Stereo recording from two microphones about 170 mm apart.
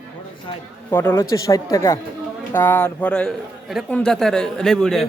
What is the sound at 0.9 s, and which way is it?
A man's voice, 15° left (ahead or behind).